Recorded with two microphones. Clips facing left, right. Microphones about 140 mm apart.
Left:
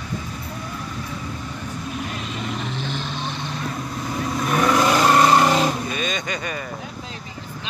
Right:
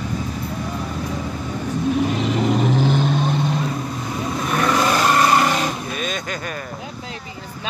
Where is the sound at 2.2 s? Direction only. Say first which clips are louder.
Right 10 dB; 85° right; by 3.3 s 55° right (ahead or behind).